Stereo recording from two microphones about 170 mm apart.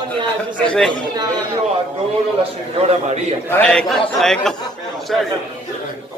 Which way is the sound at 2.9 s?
40° right (ahead or behind).